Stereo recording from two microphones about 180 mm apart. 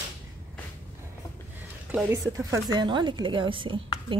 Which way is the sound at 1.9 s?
10° right (ahead or behind).